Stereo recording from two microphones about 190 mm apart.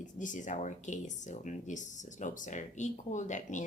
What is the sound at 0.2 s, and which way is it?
A woman's voice, 40° left (ahead or behind).